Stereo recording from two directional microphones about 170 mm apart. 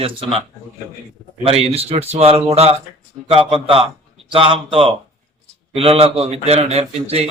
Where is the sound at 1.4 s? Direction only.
35° right (ahead or behind).